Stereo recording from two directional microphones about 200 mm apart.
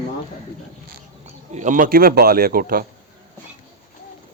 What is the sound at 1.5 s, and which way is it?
A man's voice, 40° right (ahead or behind).